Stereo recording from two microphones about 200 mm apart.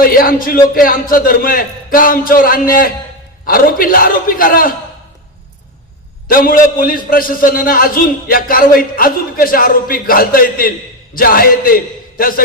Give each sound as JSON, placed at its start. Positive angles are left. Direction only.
{"t": 0.0, "sound": "a man's voice", "side_deg": 45}
{"t": 6.2, "sound": "a man's voice", "side_deg": 45}